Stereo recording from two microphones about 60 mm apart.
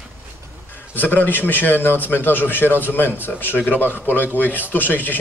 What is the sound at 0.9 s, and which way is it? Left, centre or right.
A man's voice, left.